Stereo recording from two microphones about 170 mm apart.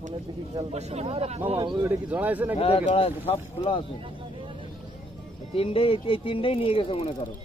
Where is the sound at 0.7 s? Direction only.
40° right (ahead or behind).